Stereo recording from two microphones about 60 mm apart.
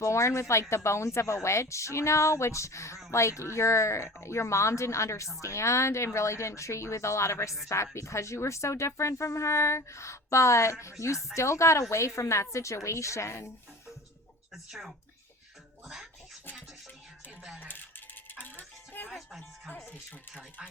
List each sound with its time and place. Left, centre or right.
0.0 s speech: left
14.5 s speech: centre
15.9 s music: centre
18.3 s music: left
19.1 s speech: centre
19.7 s speech: left